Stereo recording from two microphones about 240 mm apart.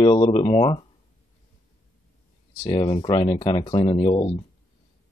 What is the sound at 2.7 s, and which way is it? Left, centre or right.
Speech, centre.